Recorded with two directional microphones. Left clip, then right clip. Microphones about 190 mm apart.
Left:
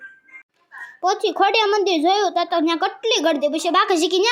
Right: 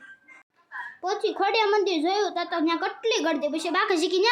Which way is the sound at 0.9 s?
35° left (ahead or behind).